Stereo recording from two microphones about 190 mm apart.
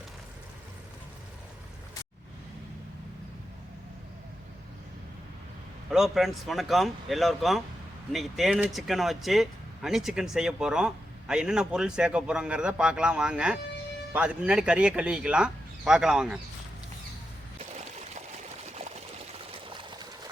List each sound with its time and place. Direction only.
5.9 s speech: centre (ahead or behind)
17.6 s trickle: 35° right (ahead or behind)
19.6 s pour: 25° right (ahead or behind)